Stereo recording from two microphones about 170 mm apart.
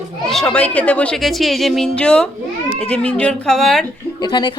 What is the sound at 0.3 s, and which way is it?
Speech, 5° left (ahead or behind).